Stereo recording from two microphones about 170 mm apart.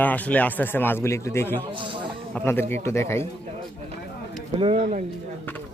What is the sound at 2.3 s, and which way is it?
Speech, 15° left (ahead or behind).